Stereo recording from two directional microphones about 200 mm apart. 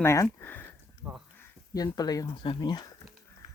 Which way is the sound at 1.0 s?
10° right (ahead or behind).